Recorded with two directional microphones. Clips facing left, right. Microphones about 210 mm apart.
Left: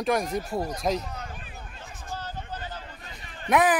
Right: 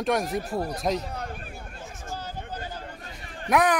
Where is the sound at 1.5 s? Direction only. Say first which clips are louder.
Right 3 dB; 10° right (ahead or behind).